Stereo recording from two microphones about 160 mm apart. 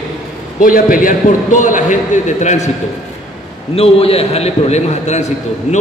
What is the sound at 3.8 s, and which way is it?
A man's voice, 40° left (ahead or behind).